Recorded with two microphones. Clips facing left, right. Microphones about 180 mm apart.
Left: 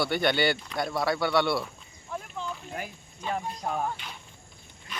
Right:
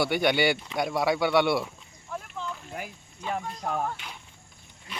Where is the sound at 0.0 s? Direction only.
15° right (ahead or behind).